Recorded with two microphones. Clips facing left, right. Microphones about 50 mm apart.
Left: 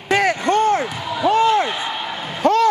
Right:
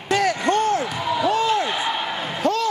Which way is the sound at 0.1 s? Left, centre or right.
Left.